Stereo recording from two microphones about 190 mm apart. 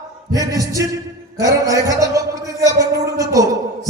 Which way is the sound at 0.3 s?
20° right (ahead or behind).